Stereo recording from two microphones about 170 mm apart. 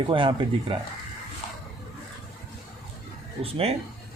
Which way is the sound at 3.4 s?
35° right (ahead or behind).